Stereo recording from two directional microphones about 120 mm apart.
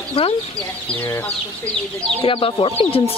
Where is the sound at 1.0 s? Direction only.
15° left (ahead or behind).